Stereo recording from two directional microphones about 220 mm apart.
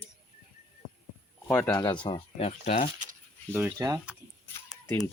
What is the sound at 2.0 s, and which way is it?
Speech, 25° left (ahead or behind).